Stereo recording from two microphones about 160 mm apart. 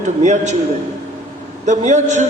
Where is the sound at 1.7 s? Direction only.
50° right (ahead or behind).